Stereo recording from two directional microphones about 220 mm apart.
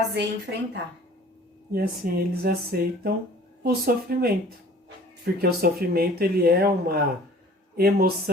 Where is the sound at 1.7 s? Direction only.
40° right (ahead or behind).